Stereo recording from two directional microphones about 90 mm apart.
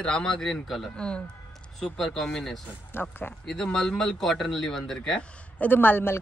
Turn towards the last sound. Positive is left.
turn(degrees=25)  # may be behind; listen again after turning